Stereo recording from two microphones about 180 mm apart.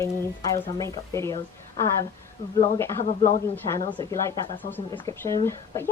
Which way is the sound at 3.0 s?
40° left (ahead or behind).